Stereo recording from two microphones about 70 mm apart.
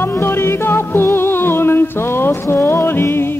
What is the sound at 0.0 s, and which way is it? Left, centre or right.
Music, left.